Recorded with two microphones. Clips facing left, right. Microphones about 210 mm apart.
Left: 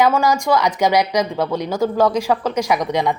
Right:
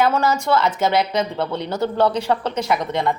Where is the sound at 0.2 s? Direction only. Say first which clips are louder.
Left 2 dB; 15° left (ahead or behind).